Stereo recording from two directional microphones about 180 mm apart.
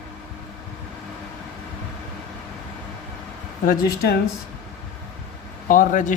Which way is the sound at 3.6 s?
50° left (ahead or behind).